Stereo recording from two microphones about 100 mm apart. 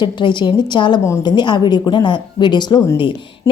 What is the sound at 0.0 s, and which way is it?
A woman's voice, 50° left (ahead or behind).